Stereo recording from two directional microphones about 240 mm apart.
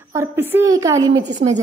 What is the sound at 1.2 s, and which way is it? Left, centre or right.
Speech, right.